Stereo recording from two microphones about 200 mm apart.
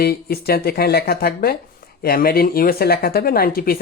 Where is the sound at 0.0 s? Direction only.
50° left (ahead or behind).